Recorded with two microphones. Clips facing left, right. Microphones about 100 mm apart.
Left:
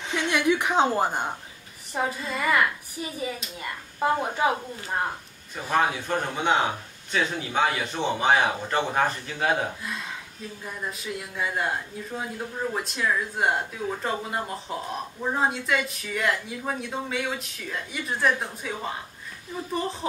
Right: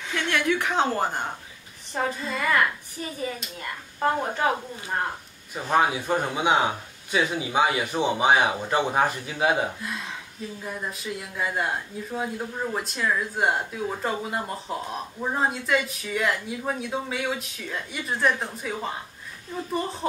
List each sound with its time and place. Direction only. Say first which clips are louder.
0.1 s a woman's voice: left 1 dB; 15° left (ahead or behind)
2.0 s a woman's voice: even; 5° left (ahead or behind)
5.7 s a man's voice: right 2 dB; 10° right (ahead or behind)